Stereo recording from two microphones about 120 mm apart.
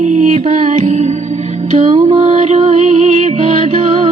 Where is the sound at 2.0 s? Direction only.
55° right (ahead or behind).